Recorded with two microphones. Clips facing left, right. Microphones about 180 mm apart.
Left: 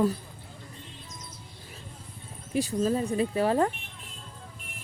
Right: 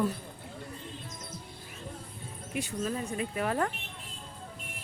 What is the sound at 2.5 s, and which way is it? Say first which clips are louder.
Speech: left 7 dB; 35° left (ahead or behind).